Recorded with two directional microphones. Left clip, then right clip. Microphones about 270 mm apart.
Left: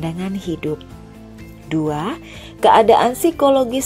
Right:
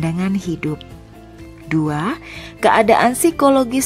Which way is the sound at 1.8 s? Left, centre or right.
Right.